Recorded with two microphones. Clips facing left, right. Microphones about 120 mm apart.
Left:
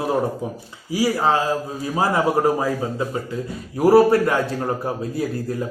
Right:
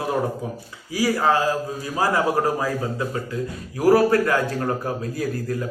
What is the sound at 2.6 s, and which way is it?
A man's voice, 25° left (ahead or behind).